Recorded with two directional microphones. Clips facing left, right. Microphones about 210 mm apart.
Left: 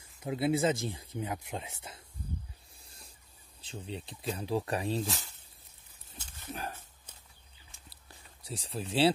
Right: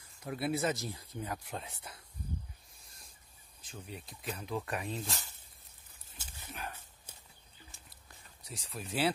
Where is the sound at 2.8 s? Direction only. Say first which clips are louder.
Left 4 dB; 30° left (ahead or behind).